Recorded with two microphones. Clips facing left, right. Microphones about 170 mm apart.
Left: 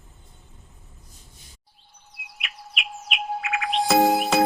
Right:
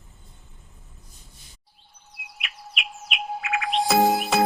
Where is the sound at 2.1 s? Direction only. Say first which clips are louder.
Even; centre (ahead or behind).